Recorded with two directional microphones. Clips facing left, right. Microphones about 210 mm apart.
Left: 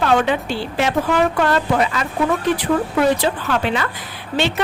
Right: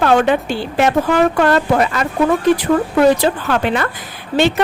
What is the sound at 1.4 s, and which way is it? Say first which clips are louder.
Speech: right 4 dB; 50° right (ahead or behind).